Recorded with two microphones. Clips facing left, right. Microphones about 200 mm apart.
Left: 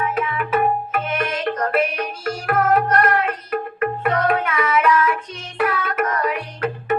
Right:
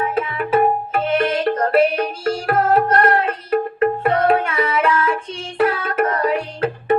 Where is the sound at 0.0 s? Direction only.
30° right (ahead or behind).